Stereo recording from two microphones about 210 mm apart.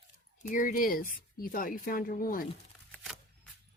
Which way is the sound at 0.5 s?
40° left (ahead or behind).